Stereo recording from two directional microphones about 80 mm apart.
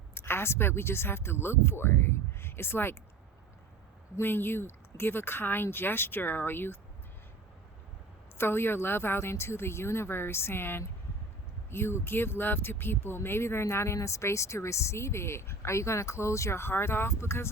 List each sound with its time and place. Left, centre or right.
0.1 s speech: left
4.2 s speech: left
8.4 s speech: left